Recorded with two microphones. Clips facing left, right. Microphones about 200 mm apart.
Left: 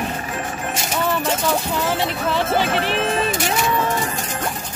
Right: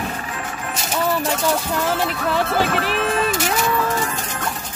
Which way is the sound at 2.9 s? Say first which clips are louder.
Even; 35° left (ahead or behind).